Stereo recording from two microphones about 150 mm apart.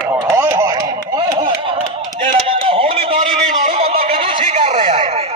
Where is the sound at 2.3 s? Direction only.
40° right (ahead or behind).